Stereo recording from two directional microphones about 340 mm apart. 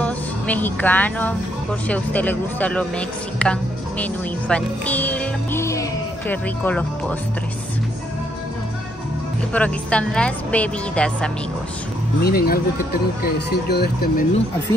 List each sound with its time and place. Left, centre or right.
0.0 s speech: centre
9.5 s speech: centre
12.2 s speech: left